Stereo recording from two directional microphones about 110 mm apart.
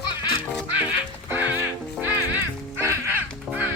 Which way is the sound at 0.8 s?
15° right (ahead or behind).